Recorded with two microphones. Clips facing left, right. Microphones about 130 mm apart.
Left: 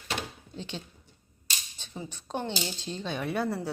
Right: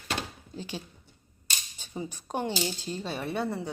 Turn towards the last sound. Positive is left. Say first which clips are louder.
# left 1 dB
turn(degrees=0)  # may be behind; listen again after turning